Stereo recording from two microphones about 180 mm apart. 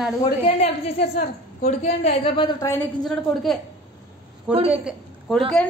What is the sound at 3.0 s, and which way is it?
A woman's voice, centre (ahead or behind).